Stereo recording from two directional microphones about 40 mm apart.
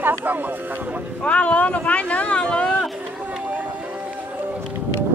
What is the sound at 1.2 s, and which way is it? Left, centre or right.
Speech, left.